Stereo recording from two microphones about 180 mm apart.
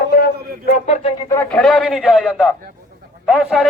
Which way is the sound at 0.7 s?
40° left (ahead or behind).